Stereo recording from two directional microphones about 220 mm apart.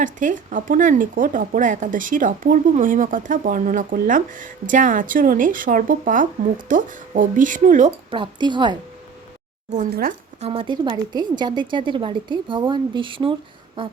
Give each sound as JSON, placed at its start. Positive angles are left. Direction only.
{"t": 0.0, "sound": "speech", "side_deg": -35}
{"t": 8.1, "sound": "a woman's voice", "side_deg": -20}
{"t": 9.7, "sound": "speech", "side_deg": -40}
{"t": 10.4, "sound": "a woman's voice", "side_deg": -25}